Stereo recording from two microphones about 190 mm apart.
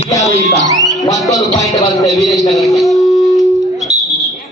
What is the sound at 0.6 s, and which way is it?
Speech, 20° right (ahead or behind).